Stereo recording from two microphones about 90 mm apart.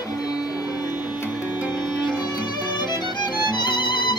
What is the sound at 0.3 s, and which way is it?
Music, 45° left (ahead or behind).